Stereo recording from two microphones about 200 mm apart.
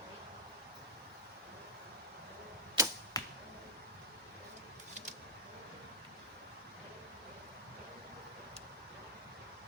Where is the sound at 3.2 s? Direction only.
20° left (ahead or behind).